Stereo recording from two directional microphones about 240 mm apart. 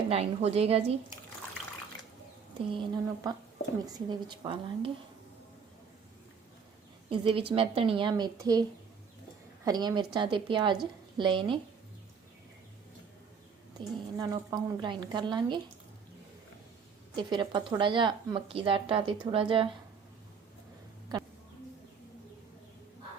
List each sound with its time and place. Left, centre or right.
0.1 s a woman's voice: right
2.6 s a woman's voice: centre
7.1 s a woman's voice: right
9.6 s a woman's voice: centre
13.7 s a woman's voice: centre
17.2 s a woman's voice: centre